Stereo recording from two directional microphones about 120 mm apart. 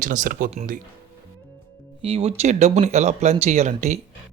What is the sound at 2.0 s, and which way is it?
Speech, 50° right (ahead or behind).